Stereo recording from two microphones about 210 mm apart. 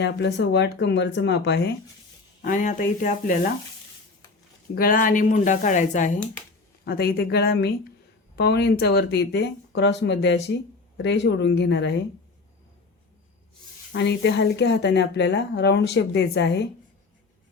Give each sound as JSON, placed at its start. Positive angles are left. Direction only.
{"t": 0.0, "sound": "a woman's voice", "side_deg": 55}
{"t": 2.4, "sound": "speech", "side_deg": 40}
{"t": 4.7, "sound": "speech", "side_deg": 45}
{"t": 6.8, "sound": "a woman's voice", "side_deg": 50}
{"t": 13.9, "sound": "a woman's voice", "side_deg": 55}